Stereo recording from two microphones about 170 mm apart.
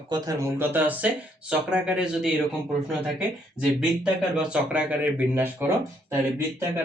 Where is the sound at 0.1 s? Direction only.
20° right (ahead or behind).